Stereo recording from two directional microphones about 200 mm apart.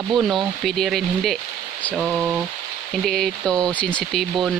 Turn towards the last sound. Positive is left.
turn(degrees=5)  # may be behind; listen again after turning